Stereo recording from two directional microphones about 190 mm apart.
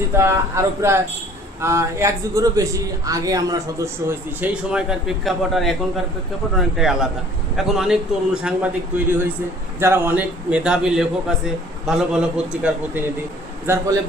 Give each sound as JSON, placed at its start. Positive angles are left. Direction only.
{"t": 0.2, "sound": "a man's voice", "side_deg": -15}
{"t": 9.8, "sound": "a man's voice", "side_deg": -10}